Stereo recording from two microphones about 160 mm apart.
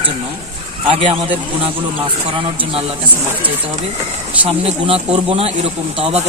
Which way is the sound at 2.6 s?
35° right (ahead or behind).